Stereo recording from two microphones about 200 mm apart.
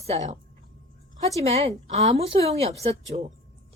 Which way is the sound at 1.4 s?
30° right (ahead or behind).